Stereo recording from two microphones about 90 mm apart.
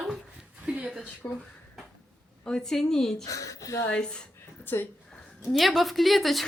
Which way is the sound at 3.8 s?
10° left (ahead or behind).